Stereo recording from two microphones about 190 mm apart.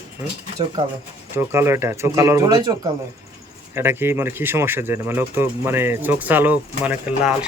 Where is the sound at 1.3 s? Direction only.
15° right (ahead or behind).